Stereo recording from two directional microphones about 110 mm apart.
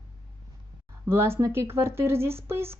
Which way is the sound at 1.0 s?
20° right (ahead or behind).